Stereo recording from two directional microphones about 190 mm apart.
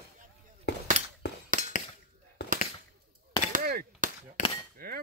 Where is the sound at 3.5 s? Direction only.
50° right (ahead or behind).